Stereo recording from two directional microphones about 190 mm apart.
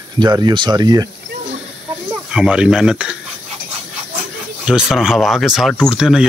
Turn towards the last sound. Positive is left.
turn(degrees=-5)  # may be behind; listen again after turning